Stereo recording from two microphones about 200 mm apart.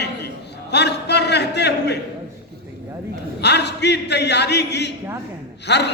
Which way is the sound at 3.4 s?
55° left (ahead or behind).